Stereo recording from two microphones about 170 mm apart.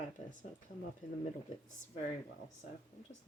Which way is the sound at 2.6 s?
50° left (ahead or behind).